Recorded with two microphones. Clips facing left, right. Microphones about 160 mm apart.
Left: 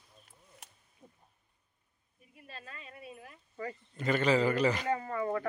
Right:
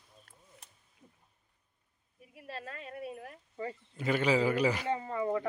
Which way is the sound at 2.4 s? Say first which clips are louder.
Right 6 dB; 75° right (ahead or behind).